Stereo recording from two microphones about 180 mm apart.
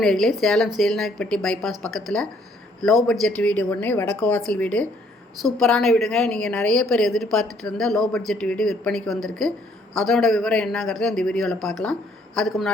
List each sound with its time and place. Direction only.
0.0 s a woman's voice: centre (ahead or behind)